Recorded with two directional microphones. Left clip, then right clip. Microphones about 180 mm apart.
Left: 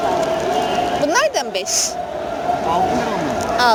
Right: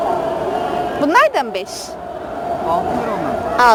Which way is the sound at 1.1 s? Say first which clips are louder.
Right 7 dB; 25° right (ahead or behind).